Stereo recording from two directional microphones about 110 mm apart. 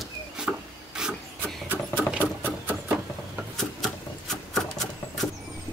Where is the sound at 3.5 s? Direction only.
5° left (ahead or behind).